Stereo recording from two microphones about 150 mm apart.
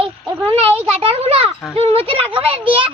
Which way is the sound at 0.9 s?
45° right (ahead or behind).